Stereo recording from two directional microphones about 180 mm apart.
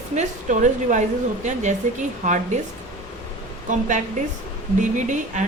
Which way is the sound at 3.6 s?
45° right (ahead or behind).